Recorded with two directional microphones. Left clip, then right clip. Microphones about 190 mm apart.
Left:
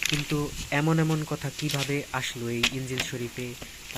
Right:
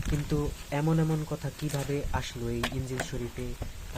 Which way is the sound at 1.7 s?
5° left (ahead or behind).